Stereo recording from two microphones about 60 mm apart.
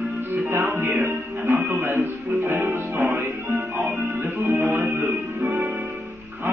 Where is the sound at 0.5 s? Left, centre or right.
Right.